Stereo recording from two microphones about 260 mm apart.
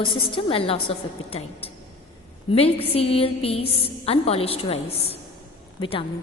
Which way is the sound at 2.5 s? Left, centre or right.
Left.